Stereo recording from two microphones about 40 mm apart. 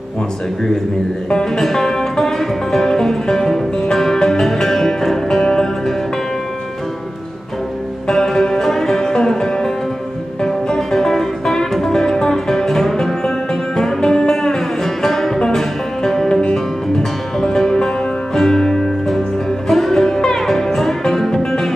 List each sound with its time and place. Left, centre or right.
1.3 s music: centre
8.1 s music: centre
16.3 s music: centre